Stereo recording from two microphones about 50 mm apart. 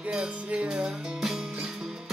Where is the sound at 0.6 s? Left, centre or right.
Centre.